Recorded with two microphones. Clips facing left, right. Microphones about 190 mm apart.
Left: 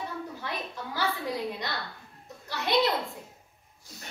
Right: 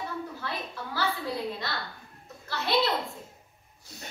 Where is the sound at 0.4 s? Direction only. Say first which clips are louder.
Even; 15° left (ahead or behind).